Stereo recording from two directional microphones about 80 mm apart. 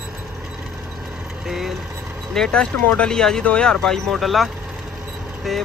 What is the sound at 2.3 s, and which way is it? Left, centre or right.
Speech, centre.